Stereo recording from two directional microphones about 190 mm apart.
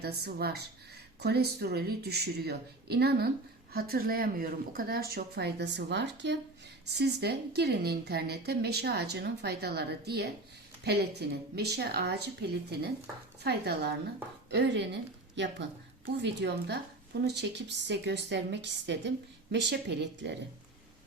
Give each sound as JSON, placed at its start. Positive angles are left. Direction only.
{"t": 0.0, "sound": "a woman's voice", "side_deg": -55}